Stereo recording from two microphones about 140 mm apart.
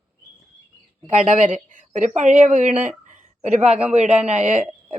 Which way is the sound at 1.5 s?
60° right (ahead or behind).